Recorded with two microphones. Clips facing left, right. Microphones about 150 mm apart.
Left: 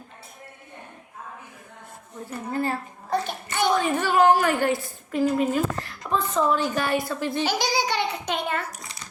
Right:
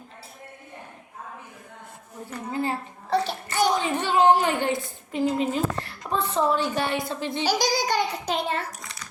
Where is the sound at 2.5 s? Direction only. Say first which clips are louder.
Left 1 dB; 20° right (ahead or behind).